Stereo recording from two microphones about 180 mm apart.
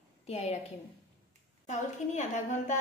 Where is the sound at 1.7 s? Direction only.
40° left (ahead or behind).